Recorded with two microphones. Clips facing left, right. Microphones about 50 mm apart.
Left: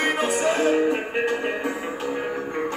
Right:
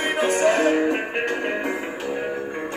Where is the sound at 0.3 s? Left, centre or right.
Right.